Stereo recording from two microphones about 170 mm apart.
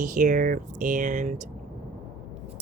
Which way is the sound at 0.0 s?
50° right (ahead or behind).